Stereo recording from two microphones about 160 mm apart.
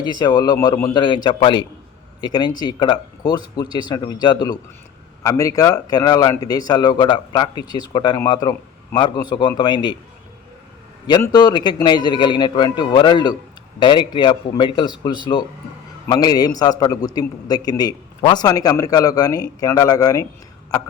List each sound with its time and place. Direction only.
0.2 s a man's voice: 25° left (ahead or behind)
11.2 s a man's voice: 25° left (ahead or behind)